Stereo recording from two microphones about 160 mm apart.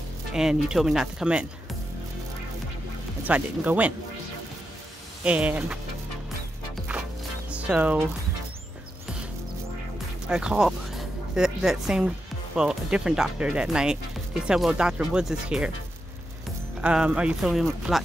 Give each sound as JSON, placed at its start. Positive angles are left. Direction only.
{"t": 0.3, "sound": "speech", "side_deg": -5}
{"t": 3.3, "sound": "speech", "side_deg": -10}
{"t": 5.2, "sound": "speech", "side_deg": -10}
{"t": 7.5, "sound": "speech", "side_deg": -10}
{"t": 10.2, "sound": "music", "side_deg": -5}
{"t": 12.5, "sound": "speech", "side_deg": -5}
{"t": 16.8, "sound": "speech", "side_deg": -5}